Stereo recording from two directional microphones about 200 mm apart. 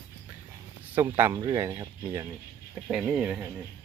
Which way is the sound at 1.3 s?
20° right (ahead or behind).